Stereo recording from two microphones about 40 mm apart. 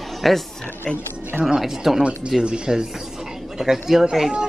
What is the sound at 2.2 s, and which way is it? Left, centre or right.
Speech, right.